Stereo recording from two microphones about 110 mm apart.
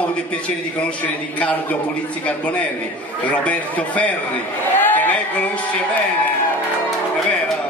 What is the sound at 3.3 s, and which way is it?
Speech, 10° left (ahead or behind).